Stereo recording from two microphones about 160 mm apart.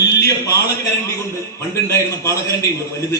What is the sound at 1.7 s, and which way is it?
Speech, 20° left (ahead or behind).